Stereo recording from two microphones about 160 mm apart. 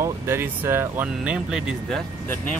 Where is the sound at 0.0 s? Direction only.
15° right (ahead or behind).